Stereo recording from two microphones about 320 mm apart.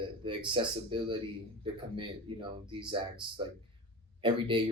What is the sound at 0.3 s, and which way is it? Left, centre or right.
Speech, centre.